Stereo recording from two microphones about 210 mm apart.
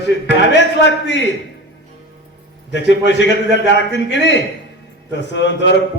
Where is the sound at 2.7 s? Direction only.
55° left (ahead or behind).